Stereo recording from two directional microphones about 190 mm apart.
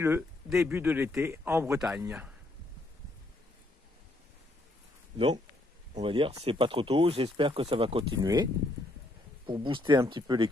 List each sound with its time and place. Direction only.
0.6 s a man's voice: 10° right (ahead or behind)
5.1 s a man's voice: 25° right (ahead or behind)
9.5 s speech: 25° right (ahead or behind)